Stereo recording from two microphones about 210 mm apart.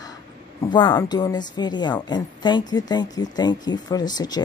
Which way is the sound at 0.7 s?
20° left (ahead or behind).